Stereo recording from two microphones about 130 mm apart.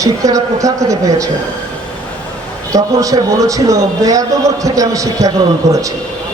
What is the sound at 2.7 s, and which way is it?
A man's voice, 25° right (ahead or behind).